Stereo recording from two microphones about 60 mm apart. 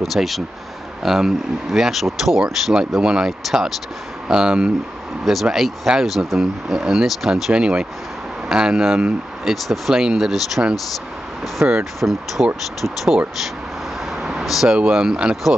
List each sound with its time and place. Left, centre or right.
0.0 s speech: centre
11.6 s speech: right
12.0 s speech: centre
14.2 s speech: centre